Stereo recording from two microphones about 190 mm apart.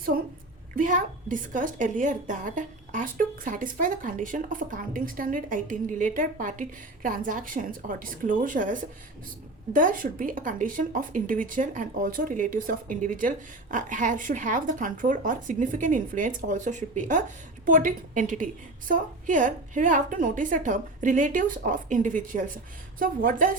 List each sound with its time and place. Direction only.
0.8 s a woman's voice: 45° right (ahead or behind)